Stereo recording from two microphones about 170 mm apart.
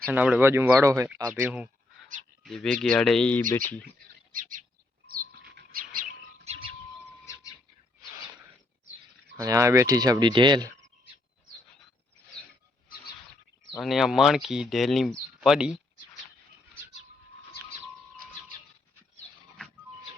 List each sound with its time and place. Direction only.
0.1 s speech: 10° right (ahead or behind)
2.4 s speech: 5° left (ahead or behind)
4.3 s bird: 55° right (ahead or behind)
5.0 s a sound: 60° right (ahead or behind)
6.4 s bird: 40° right (ahead or behind)
9.4 s speech: 20° right (ahead or behind)
13.7 s speech: centre (ahead or behind)